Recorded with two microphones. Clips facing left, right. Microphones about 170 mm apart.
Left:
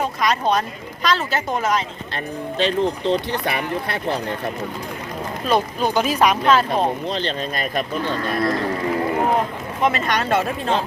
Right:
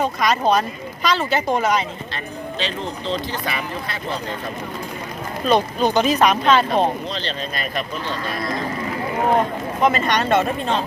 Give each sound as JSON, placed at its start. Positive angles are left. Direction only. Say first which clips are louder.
{"t": 0.0, "sound": "speech", "louder": "right 2 dB", "side_deg": 0}
{"t": 2.6, "sound": "speech", "louder": "left 8 dB", "side_deg": 55}
{"t": 5.5, "sound": "speech", "louder": "right 2 dB", "side_deg": 5}
{"t": 7.1, "sound": "speech", "louder": "left 3 dB", "side_deg": 50}
{"t": 9.8, "sound": "speech", "louder": "right 2 dB", "side_deg": 0}